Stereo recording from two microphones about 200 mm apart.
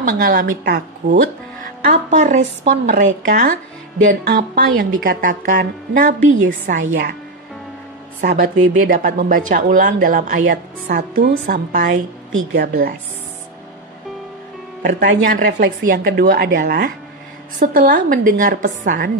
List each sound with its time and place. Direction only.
0.2 s speech: 45° right (ahead or behind)
6.8 s a woman's voice: 60° right (ahead or behind)
8.2 s speech: 50° right (ahead or behind)
14.8 s speech: 55° right (ahead or behind)
18.9 s a woman's voice: 55° right (ahead or behind)